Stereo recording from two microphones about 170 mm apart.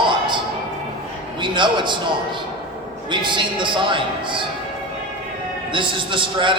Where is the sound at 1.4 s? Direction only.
30° right (ahead or behind).